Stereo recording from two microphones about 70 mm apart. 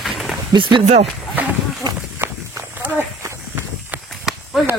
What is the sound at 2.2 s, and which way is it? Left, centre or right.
Walk, right.